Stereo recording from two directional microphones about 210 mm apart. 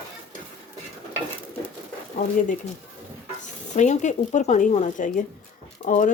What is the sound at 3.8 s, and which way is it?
Speech, 35° left (ahead or behind).